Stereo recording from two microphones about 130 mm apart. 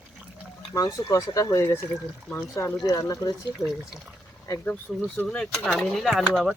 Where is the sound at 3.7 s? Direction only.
5° right (ahead or behind).